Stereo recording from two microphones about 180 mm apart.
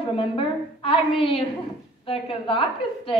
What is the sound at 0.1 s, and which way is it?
A woman's voice, 30° left (ahead or behind).